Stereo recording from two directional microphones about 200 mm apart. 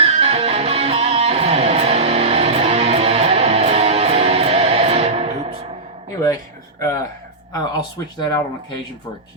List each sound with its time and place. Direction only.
0.0 s music: 30° right (ahead or behind)
6.2 s a sound: 15° left (ahead or behind)
7.5 s speech: 20° left (ahead or behind)